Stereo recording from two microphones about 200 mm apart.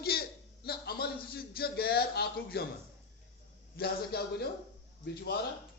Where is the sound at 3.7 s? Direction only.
50° left (ahead or behind).